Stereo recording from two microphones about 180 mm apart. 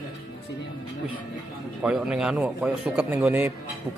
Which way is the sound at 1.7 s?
5° right (ahead or behind).